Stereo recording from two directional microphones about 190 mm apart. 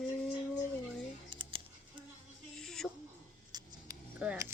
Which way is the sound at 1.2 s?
30° right (ahead or behind).